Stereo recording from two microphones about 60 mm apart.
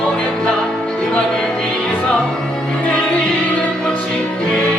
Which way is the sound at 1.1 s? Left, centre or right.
Centre.